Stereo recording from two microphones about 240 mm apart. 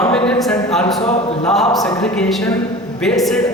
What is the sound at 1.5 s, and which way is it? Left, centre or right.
A man's voice, centre.